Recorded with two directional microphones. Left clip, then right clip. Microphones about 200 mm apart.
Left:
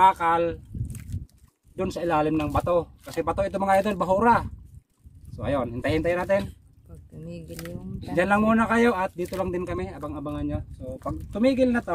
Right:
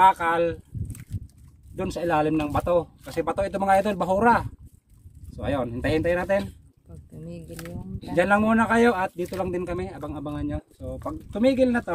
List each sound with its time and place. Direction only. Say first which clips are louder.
0.0 s speech: right 1 dB; 15° right (ahead or behind)
1.1 s a sound: even; 35° left (ahead or behind)
1.8 s speech: even; 15° right (ahead or behind)
6.9 s boat: even; centre (ahead or behind)
8.0 s speech: right 1 dB; 10° right (ahead or behind)